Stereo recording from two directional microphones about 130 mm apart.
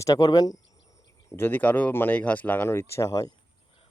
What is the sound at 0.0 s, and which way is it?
Speech, 30° left (ahead or behind).